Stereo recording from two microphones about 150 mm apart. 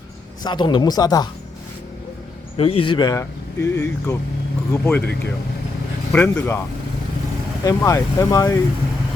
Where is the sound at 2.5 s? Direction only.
40° left (ahead or behind); by 5.0 s 10° left (ahead or behind).